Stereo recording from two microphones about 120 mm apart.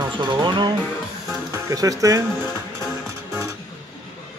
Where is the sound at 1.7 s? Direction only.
30° right (ahead or behind).